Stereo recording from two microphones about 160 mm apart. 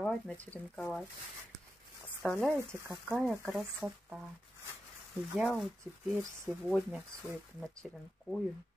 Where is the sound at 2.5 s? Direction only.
15° right (ahead or behind).